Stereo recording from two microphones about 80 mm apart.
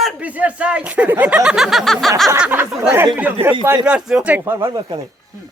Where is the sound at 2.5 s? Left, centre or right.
Right.